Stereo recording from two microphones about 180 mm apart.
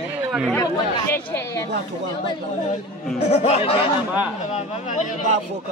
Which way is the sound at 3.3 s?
35° left (ahead or behind).